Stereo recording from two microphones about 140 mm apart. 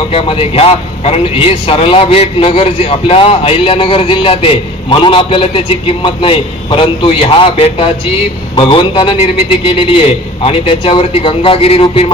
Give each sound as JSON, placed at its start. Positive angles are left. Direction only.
{"t": 0.1, "sound": "a man's voice", "side_deg": 40}